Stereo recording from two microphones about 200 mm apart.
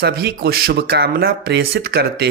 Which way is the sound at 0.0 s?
55° right (ahead or behind).